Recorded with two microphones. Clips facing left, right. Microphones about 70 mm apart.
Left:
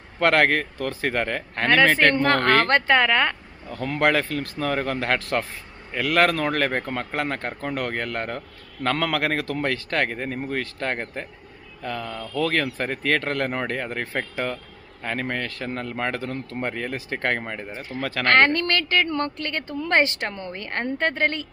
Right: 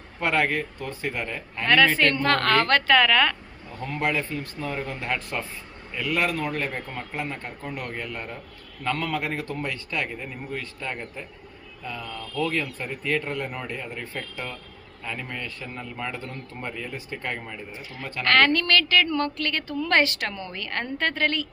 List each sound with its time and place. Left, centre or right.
0.2 s speech: left
1.6 s a woman's voice: left
3.7 s speech: left
8.8 s speech: left
11.8 s speech: left
17.7 s a woman's voice: left
18.0 s speech: left
18.3 s a woman's voice: left